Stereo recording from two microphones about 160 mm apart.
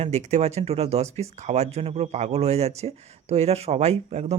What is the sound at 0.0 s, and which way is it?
Speech, 45° right (ahead or behind).